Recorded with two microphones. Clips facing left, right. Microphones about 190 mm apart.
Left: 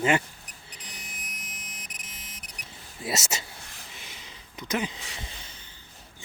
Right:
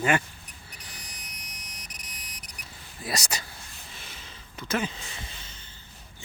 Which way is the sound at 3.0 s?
25° left (ahead or behind).